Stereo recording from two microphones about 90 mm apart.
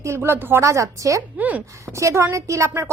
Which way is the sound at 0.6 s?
35° right (ahead or behind).